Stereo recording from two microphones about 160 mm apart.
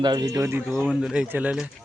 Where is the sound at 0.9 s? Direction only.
5° right (ahead or behind).